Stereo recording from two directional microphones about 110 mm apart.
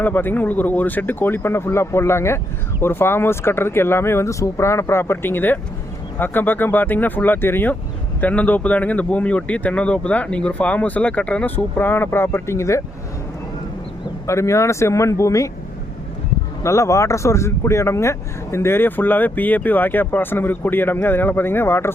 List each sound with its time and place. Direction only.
0.0 s speech: 15° left (ahead or behind)
14.3 s speech: 25° left (ahead or behind)
16.6 s speech: 25° left (ahead or behind)